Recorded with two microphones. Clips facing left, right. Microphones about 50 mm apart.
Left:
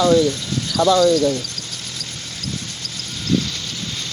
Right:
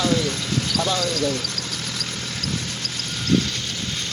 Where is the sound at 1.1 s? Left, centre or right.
Right.